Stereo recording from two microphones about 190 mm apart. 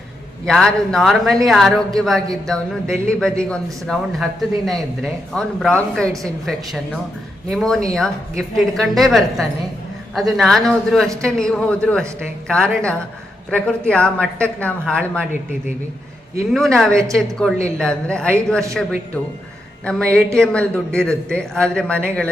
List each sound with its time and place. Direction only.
0.4 s speech: 5° left (ahead or behind)
16.5 s speech: centre (ahead or behind)